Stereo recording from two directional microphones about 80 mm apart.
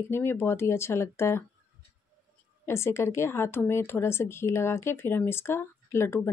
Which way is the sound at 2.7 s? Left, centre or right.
Left.